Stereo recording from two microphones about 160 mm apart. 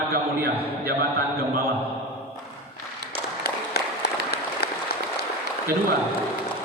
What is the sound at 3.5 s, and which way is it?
Applause, 85° left.